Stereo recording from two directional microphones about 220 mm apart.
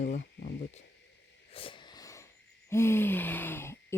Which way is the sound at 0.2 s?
50° left (ahead or behind).